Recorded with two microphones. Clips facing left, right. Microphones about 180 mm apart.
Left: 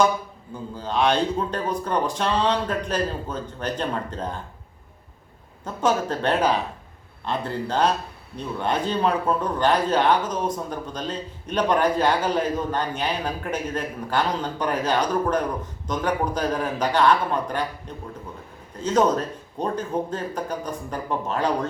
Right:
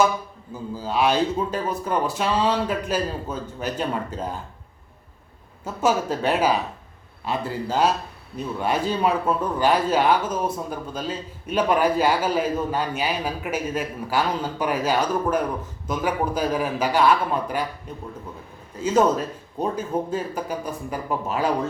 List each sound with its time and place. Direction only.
0.5 s speech: 5° right (ahead or behind)
5.6 s speech: 10° right (ahead or behind)